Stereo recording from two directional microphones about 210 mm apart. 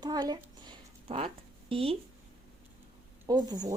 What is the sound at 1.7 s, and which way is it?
Speech, 25° right (ahead or behind).